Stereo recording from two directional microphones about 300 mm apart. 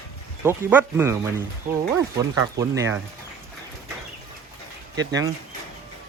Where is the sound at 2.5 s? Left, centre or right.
Centre.